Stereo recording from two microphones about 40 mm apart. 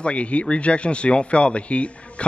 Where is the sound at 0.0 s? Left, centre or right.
Left.